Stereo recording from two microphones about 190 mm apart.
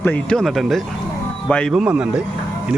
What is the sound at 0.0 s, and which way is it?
Speech, 5° left (ahead or behind).